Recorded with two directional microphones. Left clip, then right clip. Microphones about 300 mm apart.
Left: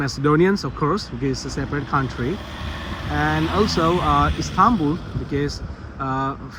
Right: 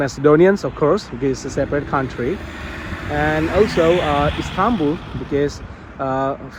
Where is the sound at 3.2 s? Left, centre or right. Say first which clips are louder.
Right 4 dB; centre.